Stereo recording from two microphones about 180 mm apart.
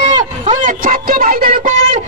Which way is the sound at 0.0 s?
45° right (ahead or behind).